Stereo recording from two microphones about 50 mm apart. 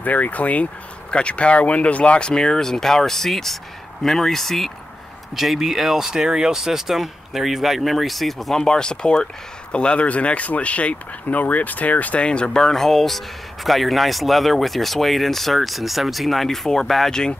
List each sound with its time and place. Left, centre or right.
0.0 s speech: left; by 4.7 s centre
5.3 s speech: centre
8.6 s speech: centre